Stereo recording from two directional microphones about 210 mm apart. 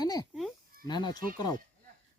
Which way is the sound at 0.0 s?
20° left (ahead or behind).